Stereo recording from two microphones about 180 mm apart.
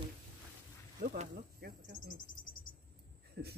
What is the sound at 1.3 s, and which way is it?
Speech, 55° right (ahead or behind).